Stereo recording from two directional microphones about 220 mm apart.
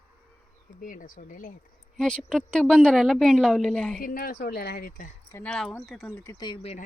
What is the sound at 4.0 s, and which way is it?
Speech, 40° left (ahead or behind).